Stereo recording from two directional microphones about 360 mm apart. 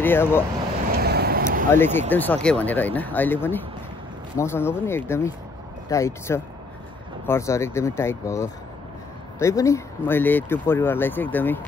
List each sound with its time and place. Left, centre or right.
0.0 s speech: centre
0.9 s vehicle: right
1.7 s speech: centre